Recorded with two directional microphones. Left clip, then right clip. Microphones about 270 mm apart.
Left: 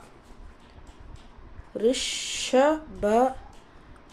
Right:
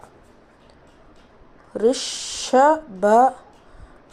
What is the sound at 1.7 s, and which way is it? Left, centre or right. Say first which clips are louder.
Speech: right 5 dB; centre.